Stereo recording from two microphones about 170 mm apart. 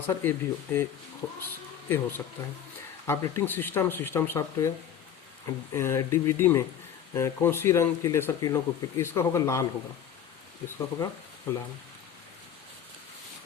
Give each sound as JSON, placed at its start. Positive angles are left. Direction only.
{"t": 0.1, "sound": "speech", "side_deg": 10}
{"t": 10.7, "sound": "speech", "side_deg": 15}